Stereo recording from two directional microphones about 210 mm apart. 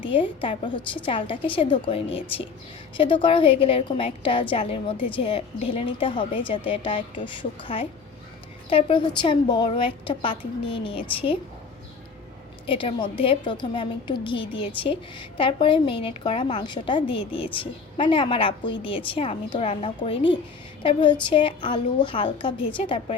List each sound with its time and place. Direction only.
0.0 s a woman's voice: 25° left (ahead or behind)
12.6 s a woman's voice: 25° left (ahead or behind)